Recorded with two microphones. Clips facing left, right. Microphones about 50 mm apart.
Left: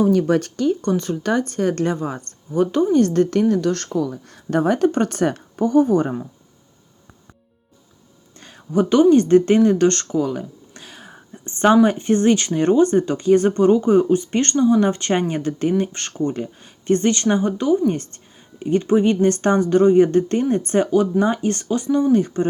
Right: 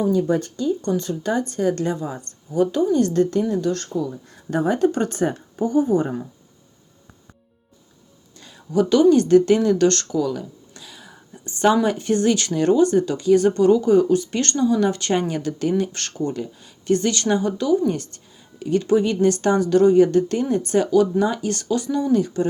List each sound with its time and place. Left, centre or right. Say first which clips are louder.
0.0 s speech: left 3 dB; left
0.9 s speech: left 2 dB; left
4.5 s speech: left 2 dB; left
8.4 s speech: left 1 dB; left